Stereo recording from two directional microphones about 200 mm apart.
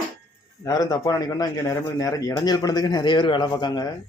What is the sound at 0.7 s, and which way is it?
A man's voice, 20° left (ahead or behind).